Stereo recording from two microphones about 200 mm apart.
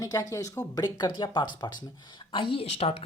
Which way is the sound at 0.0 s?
15° left (ahead or behind).